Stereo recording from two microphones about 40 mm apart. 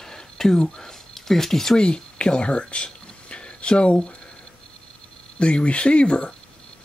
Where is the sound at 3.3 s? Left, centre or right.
Left.